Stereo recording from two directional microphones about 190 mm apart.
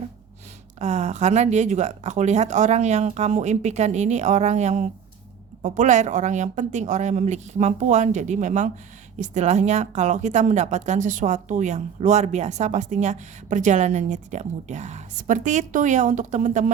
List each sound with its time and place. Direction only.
0.8 s a woman's voice: 35° right (ahead or behind)